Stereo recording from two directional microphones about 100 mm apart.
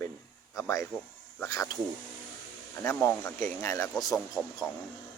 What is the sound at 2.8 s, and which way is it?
Speech, 25° left (ahead or behind).